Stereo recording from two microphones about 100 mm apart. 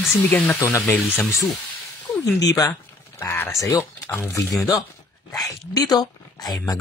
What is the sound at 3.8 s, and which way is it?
Speech, 25° left (ahead or behind).